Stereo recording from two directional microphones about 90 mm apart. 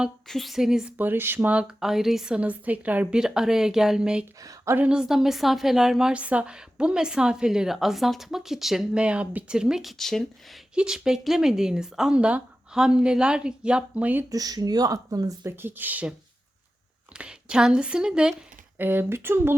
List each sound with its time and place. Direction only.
0.3 s a woman's voice: centre (ahead or behind)
0.9 s speech: 20° right (ahead or behind)
4.4 s speech: 40° right (ahead or behind)
4.9 s a woman's voice: 5° right (ahead or behind)
9.0 s speech: 15° right (ahead or behind)
10.0 s a woman's voice: 5° left (ahead or behind)
10.8 s speech: 10° right (ahead or behind)
14.3 s speech: 45° right (ahead or behind)
15.5 s speech: 20° right (ahead or behind)
17.2 s speech: 10° right (ahead or behind)
18.8 s speech: 20° right (ahead or behind)